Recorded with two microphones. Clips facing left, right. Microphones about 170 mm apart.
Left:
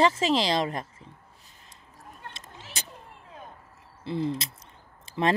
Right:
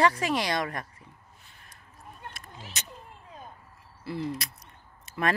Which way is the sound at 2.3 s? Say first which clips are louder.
Left 1 dB; 30° left (ahead or behind).